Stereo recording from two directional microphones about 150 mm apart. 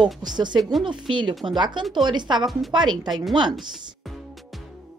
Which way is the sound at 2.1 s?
30° right (ahead or behind).